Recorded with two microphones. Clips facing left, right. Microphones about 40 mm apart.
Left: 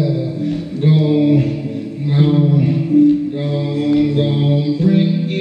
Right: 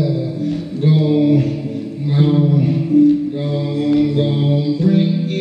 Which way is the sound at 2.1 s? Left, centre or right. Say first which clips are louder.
Left 1 dB; centre.